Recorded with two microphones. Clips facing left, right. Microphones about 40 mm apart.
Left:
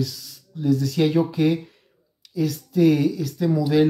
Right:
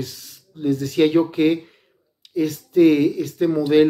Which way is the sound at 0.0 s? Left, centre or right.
Right.